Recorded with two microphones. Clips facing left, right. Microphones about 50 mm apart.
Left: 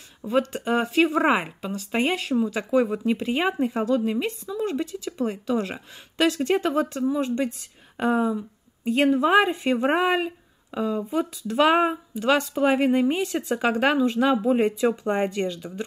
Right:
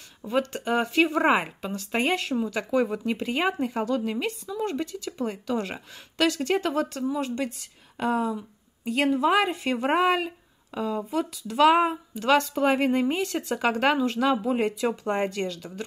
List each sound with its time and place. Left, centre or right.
0.2 s speech: centre
1.2 s speech: centre
3.8 s speech: centre
8.8 s speech: left; by 11.1 s centre
11.4 s speech: left
12.2 s speech: centre; by 15.8 s left